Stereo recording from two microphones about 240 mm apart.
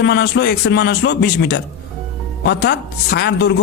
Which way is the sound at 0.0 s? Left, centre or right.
Left.